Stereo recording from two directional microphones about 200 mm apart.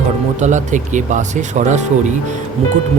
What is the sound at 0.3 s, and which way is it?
Speech, 35° right (ahead or behind).